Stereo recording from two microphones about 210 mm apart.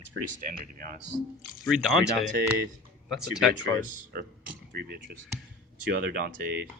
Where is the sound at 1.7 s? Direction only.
Centre (ahead or behind).